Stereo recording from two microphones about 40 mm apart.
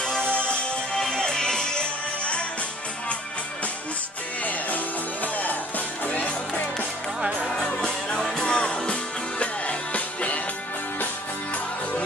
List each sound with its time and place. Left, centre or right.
0.0 s music: left
4.5 s music: left
7.6 s music: left
9.4 s music: left